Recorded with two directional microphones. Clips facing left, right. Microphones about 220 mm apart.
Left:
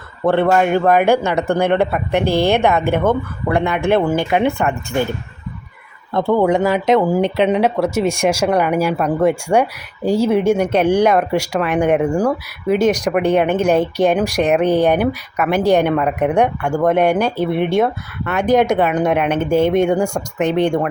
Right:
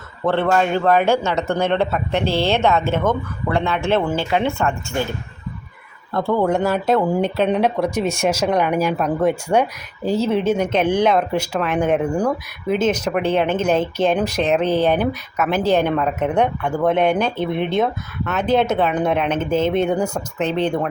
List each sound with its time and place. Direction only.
0.3 s speech: 15° left (ahead or behind)
6.1 s a man's voice: 20° left (ahead or behind)